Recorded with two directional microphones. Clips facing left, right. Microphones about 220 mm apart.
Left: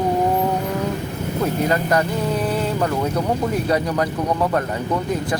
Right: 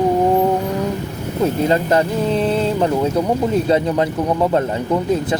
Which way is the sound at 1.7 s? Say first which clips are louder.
Right 3 dB; 25° right (ahead or behind).